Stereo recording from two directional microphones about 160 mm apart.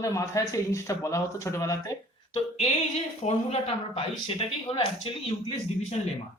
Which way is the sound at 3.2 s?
40° left (ahead or behind).